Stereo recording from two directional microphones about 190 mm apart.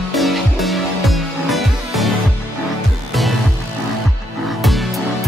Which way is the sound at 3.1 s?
Centre (ahead or behind).